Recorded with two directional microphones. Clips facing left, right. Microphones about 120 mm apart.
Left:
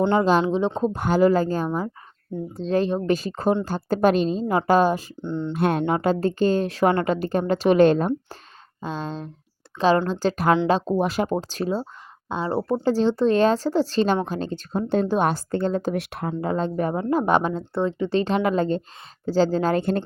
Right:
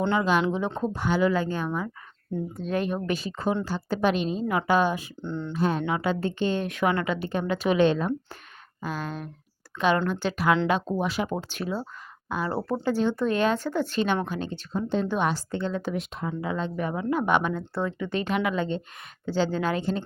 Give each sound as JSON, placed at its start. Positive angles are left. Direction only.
{"t": 0.1, "sound": "speech", "side_deg": 40}
{"t": 0.4, "sound": "speech", "side_deg": 20}
{"t": 0.9, "sound": "a woman's voice", "side_deg": 45}
{"t": 5.2, "sound": "speech", "side_deg": 20}
{"t": 5.5, "sound": "a woman's voice", "side_deg": 60}
{"t": 8.8, "sound": "a woman's voice", "side_deg": 25}
{"t": 10.7, "sound": "a woman's voice", "side_deg": 30}
{"t": 12.8, "sound": "a woman's voice", "side_deg": 35}
{"t": 14.7, "sound": "speech", "side_deg": 55}
{"t": 15.0, "sound": "a woman's voice", "side_deg": 35}
{"t": 16.0, "sound": "speech", "side_deg": 70}
{"t": 16.4, "sound": "a woman's voice", "side_deg": 40}
{"t": 19.8, "sound": "speech", "side_deg": 60}